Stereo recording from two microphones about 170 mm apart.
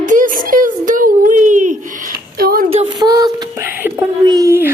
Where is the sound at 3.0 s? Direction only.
25° right (ahead or behind).